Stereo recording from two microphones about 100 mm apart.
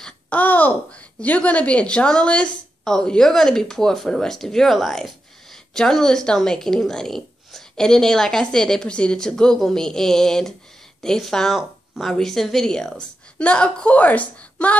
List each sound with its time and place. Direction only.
0.0 s a child's voice: 15° left (ahead or behind)